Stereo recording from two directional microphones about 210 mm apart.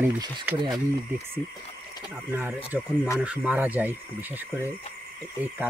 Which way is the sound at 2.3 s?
10° right (ahead or behind).